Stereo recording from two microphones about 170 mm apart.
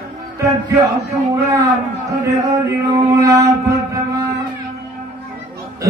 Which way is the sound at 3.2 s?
20° right (ahead or behind).